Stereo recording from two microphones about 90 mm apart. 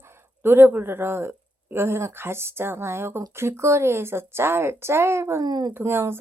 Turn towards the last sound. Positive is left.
turn(degrees=-30)  # may be behind; listen again after turning